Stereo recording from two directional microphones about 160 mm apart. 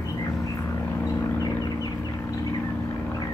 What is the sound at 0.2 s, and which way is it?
Vehicle, 15° left (ahead or behind).